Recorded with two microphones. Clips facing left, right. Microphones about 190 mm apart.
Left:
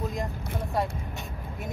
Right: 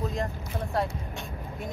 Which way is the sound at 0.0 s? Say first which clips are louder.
Right 1 dB; centre (ahead or behind).